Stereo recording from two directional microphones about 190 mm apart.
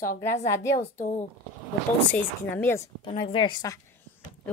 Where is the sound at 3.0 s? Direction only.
30° left (ahead or behind).